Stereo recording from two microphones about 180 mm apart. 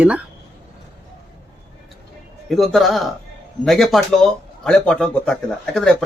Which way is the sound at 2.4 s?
Centre (ahead or behind).